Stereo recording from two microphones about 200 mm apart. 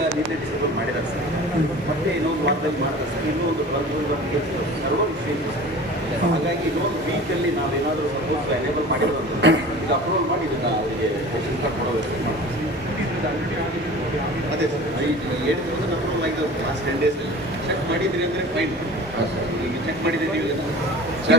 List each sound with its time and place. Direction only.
9.4 s a man's voice: 60° right (ahead or behind)
21.3 s a man's voice: 60° right (ahead or behind)